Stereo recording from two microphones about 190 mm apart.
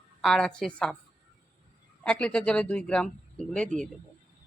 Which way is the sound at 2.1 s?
5° left (ahead or behind).